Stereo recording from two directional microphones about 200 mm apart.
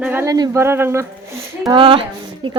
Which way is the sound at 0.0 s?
10° right (ahead or behind).